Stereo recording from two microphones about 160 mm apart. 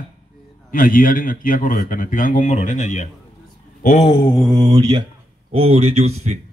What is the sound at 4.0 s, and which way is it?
Mantra, 30° left (ahead or behind).